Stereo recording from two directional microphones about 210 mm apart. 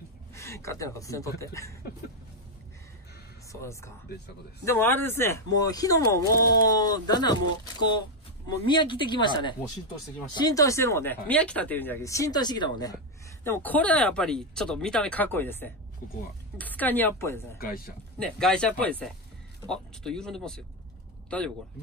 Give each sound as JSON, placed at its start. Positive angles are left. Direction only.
{"t": 0.3, "sound": "speech", "side_deg": 15}
{"t": 4.6, "sound": "speech", "side_deg": 10}
{"t": 8.6, "sound": "speech", "side_deg": 25}
{"t": 13.4, "sound": "speech", "side_deg": 10}
{"t": 17.6, "sound": "a man's voice", "side_deg": 45}
{"t": 18.2, "sound": "speech", "side_deg": 5}